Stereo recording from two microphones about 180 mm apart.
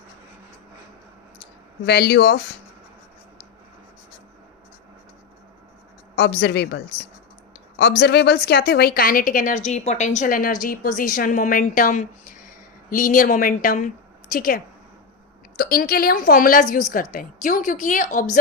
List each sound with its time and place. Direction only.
1.8 s speech: 65° left (ahead or behind)
6.1 s speech: 65° left (ahead or behind)
7.8 s a woman's voice: 65° left (ahead or behind); by 18.3 s 45° left (ahead or behind)